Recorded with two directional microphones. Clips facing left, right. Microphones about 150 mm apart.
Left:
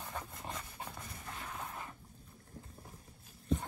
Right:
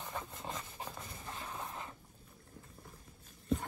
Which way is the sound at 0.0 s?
25° right (ahead or behind).